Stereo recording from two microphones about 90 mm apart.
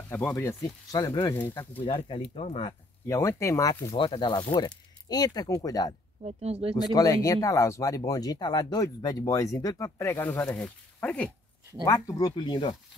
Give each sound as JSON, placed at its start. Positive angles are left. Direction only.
{"t": 0.1, "sound": "speech", "side_deg": 30}
{"t": 0.9, "sound": "speech", "side_deg": 45}
{"t": 1.8, "sound": "speech", "side_deg": 85}
{"t": 3.1, "sound": "speech", "side_deg": 35}
{"t": 3.9, "sound": "speech", "side_deg": 70}
{"t": 10.4, "sound": "speech", "side_deg": 10}
{"t": 11.8, "sound": "speech", "side_deg": 40}
{"t": 12.4, "sound": "speech", "side_deg": 60}